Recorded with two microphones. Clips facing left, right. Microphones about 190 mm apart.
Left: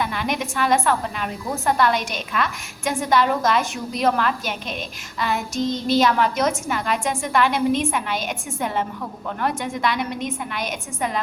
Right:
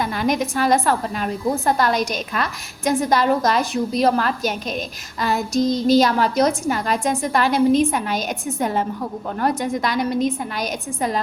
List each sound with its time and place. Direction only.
0.0 s a woman's voice: 40° right (ahead or behind)